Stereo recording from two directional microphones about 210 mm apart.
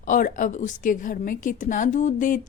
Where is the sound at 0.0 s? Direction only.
40° left (ahead or behind).